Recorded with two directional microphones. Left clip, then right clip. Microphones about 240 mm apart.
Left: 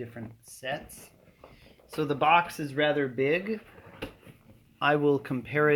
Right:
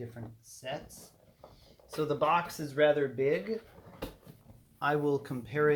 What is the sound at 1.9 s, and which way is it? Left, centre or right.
Speech, left.